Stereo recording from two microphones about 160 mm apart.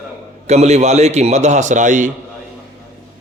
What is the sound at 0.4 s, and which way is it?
Speech, 45° right (ahead or behind).